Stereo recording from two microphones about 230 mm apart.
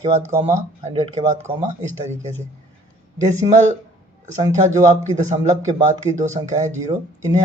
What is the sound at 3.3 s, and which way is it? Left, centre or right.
Speech, centre.